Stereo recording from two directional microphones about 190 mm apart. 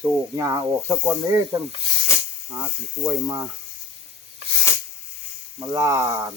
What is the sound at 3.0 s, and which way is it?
Speech, 15° right (ahead or behind).